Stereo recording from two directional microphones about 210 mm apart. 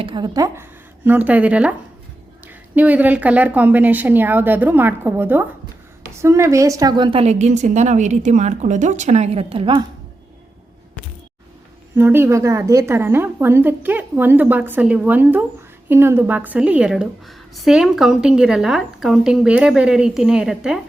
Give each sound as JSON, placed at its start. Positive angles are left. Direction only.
{"t": 0.0, "sound": "a woman's voice", "side_deg": -20}
{"t": 11.9, "sound": "a woman's voice", "side_deg": -10}